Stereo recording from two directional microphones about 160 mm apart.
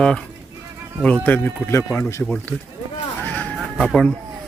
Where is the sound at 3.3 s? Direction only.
10° left (ahead or behind).